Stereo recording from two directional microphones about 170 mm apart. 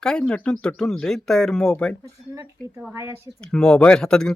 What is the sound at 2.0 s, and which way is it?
Speech, 15° right (ahead or behind).